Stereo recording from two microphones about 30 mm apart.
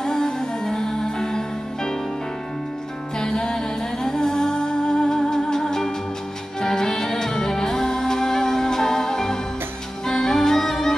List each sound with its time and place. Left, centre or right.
0.0 s music: centre
3.2 s music: left